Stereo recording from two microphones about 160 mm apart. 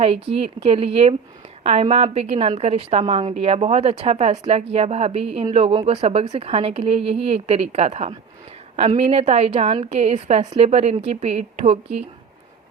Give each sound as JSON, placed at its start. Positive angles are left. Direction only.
{"t": 0.0, "sound": "a woman's voice", "side_deg": -35}